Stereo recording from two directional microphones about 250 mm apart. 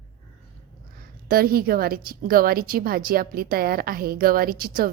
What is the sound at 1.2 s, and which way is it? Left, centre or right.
A woman's voice, right.